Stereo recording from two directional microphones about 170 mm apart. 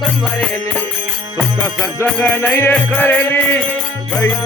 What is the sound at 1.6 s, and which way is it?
Music, 15° left (ahead or behind).